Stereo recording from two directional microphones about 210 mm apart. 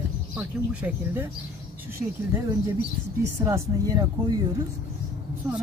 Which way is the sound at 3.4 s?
15° right (ahead or behind).